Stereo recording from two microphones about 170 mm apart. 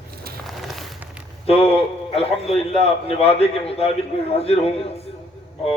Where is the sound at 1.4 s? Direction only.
35° left (ahead or behind).